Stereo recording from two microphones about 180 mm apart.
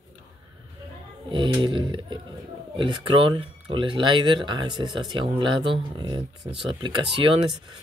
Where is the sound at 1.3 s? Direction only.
25° right (ahead or behind).